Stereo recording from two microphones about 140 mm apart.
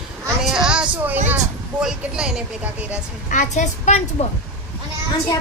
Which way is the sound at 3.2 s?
65° left (ahead or behind).